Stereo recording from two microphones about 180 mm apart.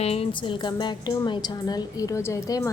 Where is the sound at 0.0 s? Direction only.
35° left (ahead or behind).